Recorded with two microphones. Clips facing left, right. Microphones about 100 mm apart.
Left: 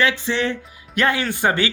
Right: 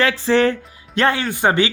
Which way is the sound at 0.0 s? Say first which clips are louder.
Right 5 dB; 35° right (ahead or behind).